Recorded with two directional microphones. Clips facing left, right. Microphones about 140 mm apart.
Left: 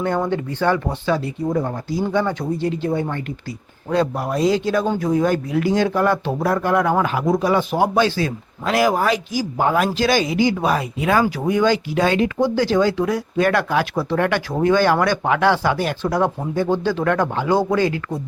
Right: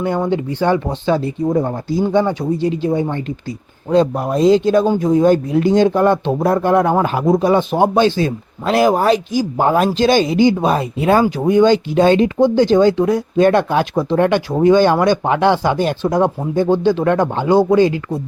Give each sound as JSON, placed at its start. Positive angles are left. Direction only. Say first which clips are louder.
{"t": 0.0, "sound": "speech", "louder": "right 3 dB", "side_deg": -10}